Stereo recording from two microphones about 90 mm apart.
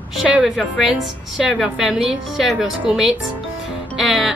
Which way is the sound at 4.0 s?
Centre (ahead or behind).